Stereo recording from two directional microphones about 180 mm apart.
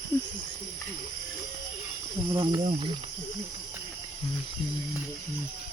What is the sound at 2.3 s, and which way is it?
Speech, 25° right (ahead or behind).